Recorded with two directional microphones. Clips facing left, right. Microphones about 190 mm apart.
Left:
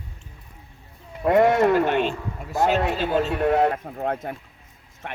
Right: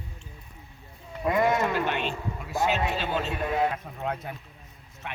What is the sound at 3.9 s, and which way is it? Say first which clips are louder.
A man's voice: left 5 dB; 50° left (ahead or behind).